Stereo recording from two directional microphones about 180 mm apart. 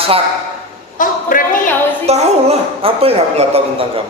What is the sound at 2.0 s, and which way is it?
A woman's voice, 35° right (ahead or behind).